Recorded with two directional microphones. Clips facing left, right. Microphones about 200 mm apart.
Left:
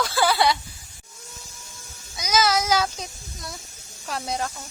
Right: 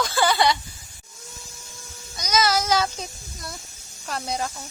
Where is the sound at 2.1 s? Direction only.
5° left (ahead or behind).